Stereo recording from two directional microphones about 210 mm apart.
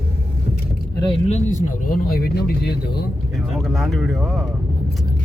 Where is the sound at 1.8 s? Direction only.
45° left (ahead or behind).